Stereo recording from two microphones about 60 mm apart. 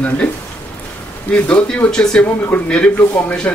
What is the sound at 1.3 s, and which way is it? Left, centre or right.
Speech, centre.